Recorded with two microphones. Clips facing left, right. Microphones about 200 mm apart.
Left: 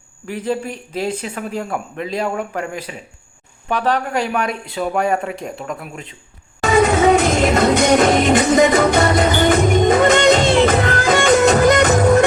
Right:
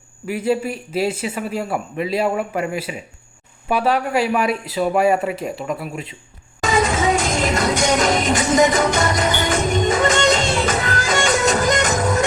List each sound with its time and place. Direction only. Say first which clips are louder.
0.3 s speech: right 2 dB; 10° right (ahead or behind)
6.6 s music: left 5 dB; 60° left (ahead or behind)